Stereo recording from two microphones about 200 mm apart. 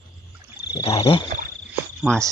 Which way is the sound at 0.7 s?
25° left (ahead or behind).